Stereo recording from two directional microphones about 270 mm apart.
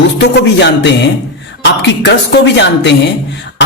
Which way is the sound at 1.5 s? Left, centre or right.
Left.